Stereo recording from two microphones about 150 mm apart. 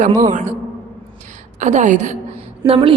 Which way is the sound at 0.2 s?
60° right (ahead or behind).